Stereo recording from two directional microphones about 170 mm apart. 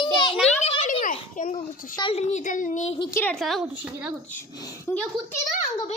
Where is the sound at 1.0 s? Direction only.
50° left (ahead or behind).